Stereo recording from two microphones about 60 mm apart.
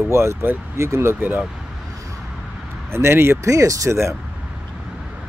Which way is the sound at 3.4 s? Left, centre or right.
Right.